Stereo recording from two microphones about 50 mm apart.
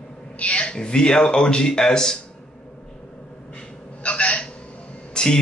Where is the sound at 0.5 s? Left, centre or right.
Centre.